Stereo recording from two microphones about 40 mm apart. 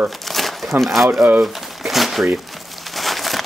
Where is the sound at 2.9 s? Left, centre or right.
Centre.